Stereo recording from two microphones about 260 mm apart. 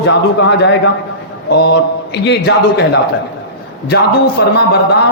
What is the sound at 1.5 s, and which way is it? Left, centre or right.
Speech, left.